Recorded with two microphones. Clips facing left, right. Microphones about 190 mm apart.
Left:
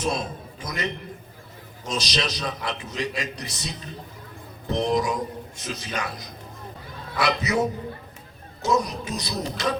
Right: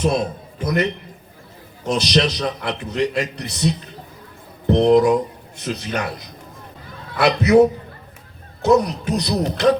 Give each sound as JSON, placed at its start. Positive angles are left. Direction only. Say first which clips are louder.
{"t": 0.0, "sound": "a man's voice", "louder": "right 7 dB", "side_deg": -60}
{"t": 1.9, "sound": "a man's voice", "louder": "right 9 dB", "side_deg": -60}